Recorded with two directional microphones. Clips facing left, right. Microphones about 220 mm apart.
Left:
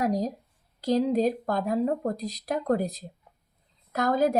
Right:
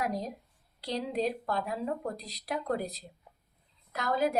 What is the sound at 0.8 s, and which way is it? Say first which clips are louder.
Speech: left 9 dB; 45° left (ahead or behind).